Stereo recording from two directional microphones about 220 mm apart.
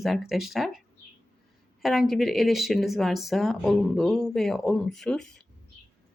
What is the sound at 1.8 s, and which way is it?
Speech, centre (ahead or behind).